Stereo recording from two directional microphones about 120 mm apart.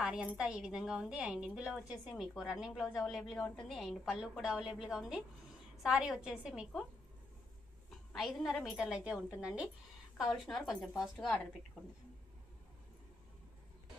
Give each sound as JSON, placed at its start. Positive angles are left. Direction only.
{"t": 0.0, "sound": "a woman's voice", "side_deg": -5}
{"t": 8.1, "sound": "a woman's voice", "side_deg": 0}